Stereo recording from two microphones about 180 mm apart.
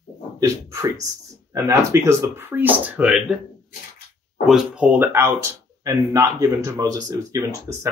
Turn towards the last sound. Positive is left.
turn(degrees=-15)  # may be behind; listen again after turning